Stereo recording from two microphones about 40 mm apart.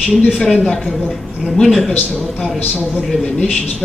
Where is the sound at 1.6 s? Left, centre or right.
Centre.